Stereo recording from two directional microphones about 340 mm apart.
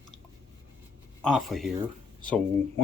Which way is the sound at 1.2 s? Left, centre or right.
Centre.